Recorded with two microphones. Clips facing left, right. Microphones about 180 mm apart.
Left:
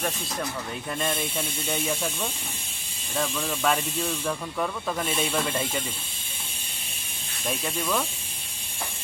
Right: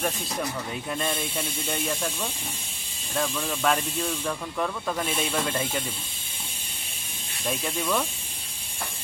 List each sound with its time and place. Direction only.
0.9 s speech: centre (ahead or behind)
7.6 s speech: centre (ahead or behind)